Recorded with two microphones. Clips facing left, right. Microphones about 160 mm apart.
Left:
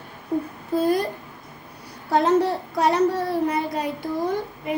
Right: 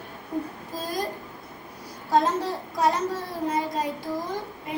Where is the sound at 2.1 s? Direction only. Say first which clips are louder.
Left 4 dB; 65° left (ahead or behind).